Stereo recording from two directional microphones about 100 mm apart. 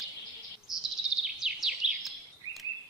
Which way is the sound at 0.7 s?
35° left (ahead or behind).